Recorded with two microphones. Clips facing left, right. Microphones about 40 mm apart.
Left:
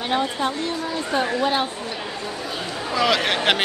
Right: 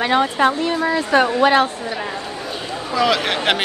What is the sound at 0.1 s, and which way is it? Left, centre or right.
Speech, right.